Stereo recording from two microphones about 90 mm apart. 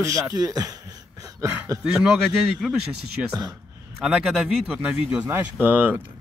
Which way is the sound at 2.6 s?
Centre (ahead or behind).